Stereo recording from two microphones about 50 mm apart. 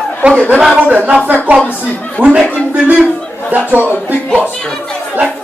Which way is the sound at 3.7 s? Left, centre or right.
Right.